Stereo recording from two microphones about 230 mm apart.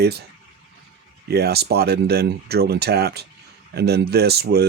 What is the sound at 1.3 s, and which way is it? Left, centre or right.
Speech, right.